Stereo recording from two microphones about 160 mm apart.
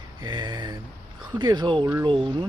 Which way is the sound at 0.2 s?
25° right (ahead or behind).